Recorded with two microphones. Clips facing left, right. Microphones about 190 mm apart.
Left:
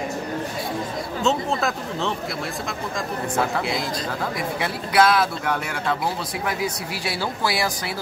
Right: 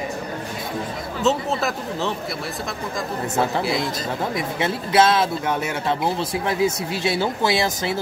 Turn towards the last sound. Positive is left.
turn(degrees=-25)  # may be behind; listen again after turning